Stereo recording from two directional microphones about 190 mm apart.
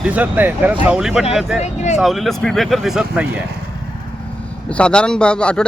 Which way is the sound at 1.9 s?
Centre (ahead or behind).